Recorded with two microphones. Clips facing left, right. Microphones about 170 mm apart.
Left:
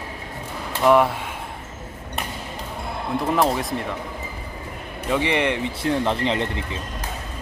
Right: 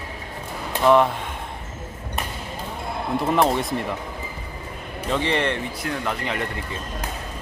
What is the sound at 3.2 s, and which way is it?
Speech, centre (ahead or behind).